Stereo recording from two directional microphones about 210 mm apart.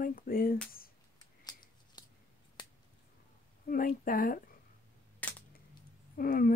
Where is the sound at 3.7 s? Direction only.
40° left (ahead or behind).